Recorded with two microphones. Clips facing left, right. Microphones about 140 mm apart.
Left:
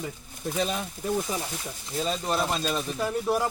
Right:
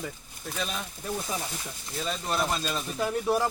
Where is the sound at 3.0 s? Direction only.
Centre (ahead or behind).